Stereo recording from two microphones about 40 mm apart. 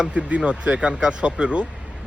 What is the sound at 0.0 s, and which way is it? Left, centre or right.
Speech, right.